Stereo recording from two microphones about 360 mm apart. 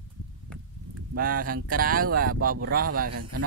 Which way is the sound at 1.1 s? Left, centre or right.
Right.